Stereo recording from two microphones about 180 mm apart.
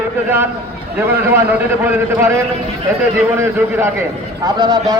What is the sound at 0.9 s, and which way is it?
A man's voice, 10° right (ahead or behind).